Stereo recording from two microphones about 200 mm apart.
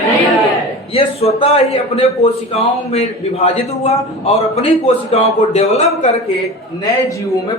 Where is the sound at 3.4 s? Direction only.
30° left (ahead or behind).